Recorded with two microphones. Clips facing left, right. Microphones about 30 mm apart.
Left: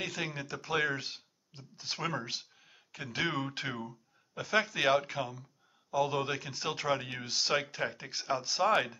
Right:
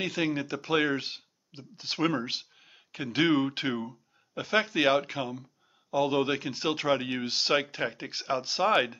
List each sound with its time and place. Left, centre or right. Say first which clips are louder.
0.0 s speech: right 7 dB; centre